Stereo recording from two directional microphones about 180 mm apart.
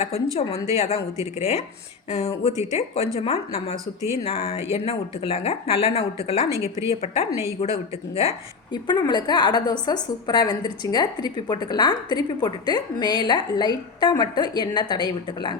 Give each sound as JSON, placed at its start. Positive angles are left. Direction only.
{"t": 0.0, "sound": "a woman's voice", "side_deg": 35}
{"t": 1.1, "sound": "a woman's voice", "side_deg": -15}
{"t": 2.0, "sound": "a woman's voice", "side_deg": 35}
{"t": 2.5, "sound": "a woman's voice", "side_deg": -20}
{"t": 2.7, "sound": "a woman's voice", "side_deg": 35}
{"t": 6.5, "sound": "a woman's voice", "side_deg": -15}
{"t": 7.0, "sound": "a woman's voice", "side_deg": 35}
{"t": 8.7, "sound": "a woman's voice", "side_deg": 25}